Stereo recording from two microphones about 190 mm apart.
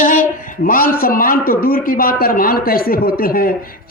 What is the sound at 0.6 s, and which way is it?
A man's voice, 50° left (ahead or behind).